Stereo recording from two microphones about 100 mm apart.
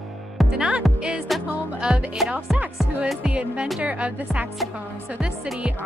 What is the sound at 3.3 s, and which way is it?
Speech, 10° right (ahead or behind).